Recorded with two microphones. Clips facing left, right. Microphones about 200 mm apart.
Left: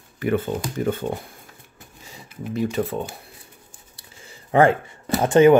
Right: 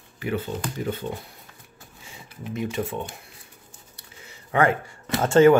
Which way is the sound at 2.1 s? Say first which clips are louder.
Left 4 dB; 35° left (ahead or behind).